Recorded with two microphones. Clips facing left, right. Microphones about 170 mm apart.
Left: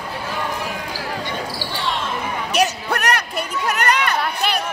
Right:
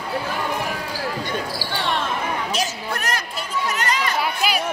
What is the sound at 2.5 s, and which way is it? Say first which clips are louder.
Chatter: left 5 dB; 65° left (ahead or behind).